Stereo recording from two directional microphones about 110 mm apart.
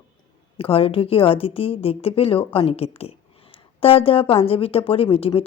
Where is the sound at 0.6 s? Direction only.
55° left (ahead or behind).